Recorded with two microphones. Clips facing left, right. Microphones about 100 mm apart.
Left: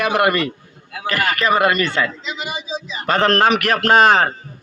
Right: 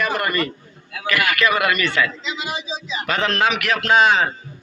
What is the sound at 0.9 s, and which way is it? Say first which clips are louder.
A man's voice: even; 35° left (ahead or behind).